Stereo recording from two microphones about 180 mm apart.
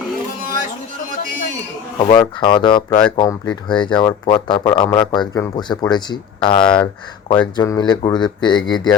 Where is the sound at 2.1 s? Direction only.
25° left (ahead or behind).